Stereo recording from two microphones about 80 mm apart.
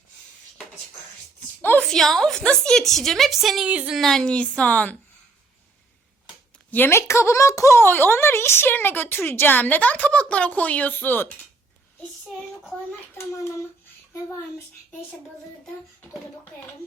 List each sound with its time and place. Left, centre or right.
1.8 s a woman's voice: centre
3.7 s speech: centre
3.9 s a woman's voice: centre
6.7 s speech: left
13.1 s a child's voice: left